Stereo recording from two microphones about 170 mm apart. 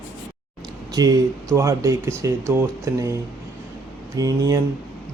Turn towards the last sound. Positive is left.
turn(degrees=-20)  # may be behind; listen again after turning